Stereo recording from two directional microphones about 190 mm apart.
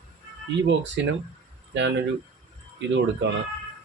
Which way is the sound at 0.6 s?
70° right (ahead or behind).